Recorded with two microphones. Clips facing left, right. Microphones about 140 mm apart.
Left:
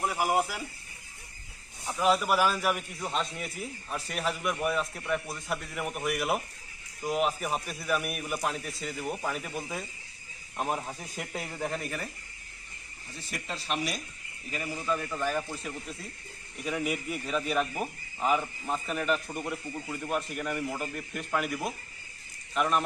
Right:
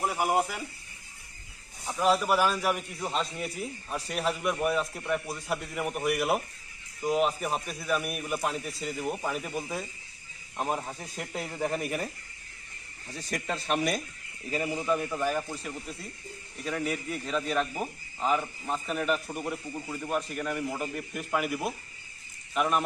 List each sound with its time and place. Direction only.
0.0 s speech: centre (ahead or behind)
1.8 s a man's voice: centre (ahead or behind)
13.3 s speech: 50° right (ahead or behind)
14.5 s a man's voice: 25° right (ahead or behind); by 16.0 s centre (ahead or behind)
16.6 s a man's voice: 10° left (ahead or behind)